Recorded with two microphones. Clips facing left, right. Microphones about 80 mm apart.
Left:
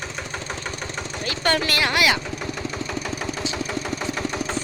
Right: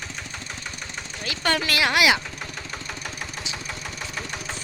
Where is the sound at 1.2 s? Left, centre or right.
Centre.